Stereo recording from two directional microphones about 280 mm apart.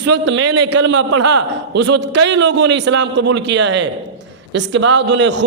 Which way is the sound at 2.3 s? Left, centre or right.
Right.